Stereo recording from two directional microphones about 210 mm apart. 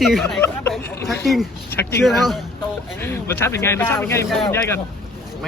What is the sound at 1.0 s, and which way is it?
Speech, centre (ahead or behind).